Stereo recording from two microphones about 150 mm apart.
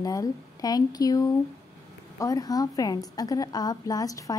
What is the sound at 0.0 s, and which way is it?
A woman's voice, 25° left (ahead or behind).